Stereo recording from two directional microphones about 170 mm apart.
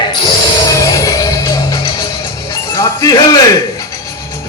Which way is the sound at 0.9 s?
20° left (ahead or behind).